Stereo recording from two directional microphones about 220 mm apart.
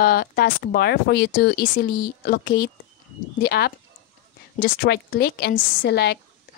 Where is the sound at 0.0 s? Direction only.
45° left (ahead or behind).